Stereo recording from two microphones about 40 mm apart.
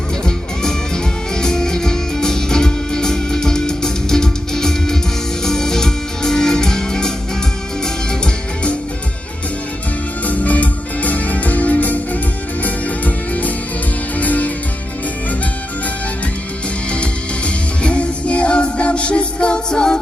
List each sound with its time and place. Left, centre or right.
0.3 s music: centre
10.2 s music: left
16.9 s music: left